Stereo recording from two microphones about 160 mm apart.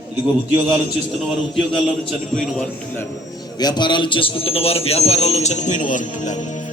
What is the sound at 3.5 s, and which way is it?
A man's voice, 25° left (ahead or behind).